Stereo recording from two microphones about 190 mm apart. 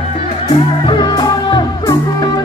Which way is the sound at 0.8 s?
25° left (ahead or behind).